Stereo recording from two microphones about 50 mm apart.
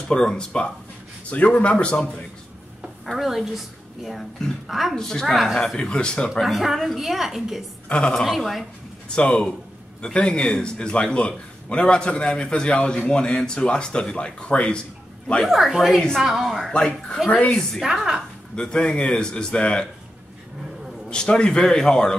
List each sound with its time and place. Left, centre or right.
0.1 s a man's voice: centre
3.1 s a woman's voice: centre
4.9 s speech: centre
5.2 s a woman's voice: centre
5.8 s speech: centre
6.4 s a woman's voice: centre
9.1 s a man's voice: centre
15.4 s a woman's voice: centre
17.3 s a man's voice: left
17.8 s a woman's voice: centre
18.6 s speech: centre
21.1 s speech: centre